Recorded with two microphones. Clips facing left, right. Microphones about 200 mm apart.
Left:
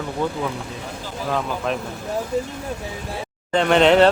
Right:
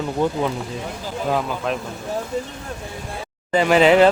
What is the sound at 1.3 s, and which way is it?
Speech, 5° right (ahead or behind).